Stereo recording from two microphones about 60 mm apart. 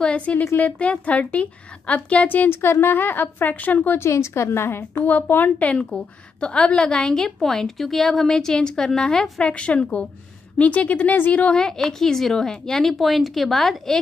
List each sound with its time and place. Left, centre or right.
0.0 s a woman's voice: left
2.5 s a woman's voice: left
4.0 s a woman's voice: left
5.0 s a woman's voice: left
11.5 s a woman's voice: centre